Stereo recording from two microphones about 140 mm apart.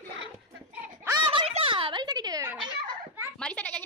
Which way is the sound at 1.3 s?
45° right (ahead or behind).